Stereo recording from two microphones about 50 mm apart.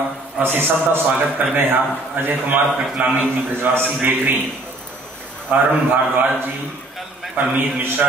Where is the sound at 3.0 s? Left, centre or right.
Right.